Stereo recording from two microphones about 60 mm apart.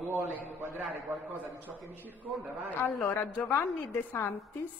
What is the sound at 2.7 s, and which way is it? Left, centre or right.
A woman's voice, left.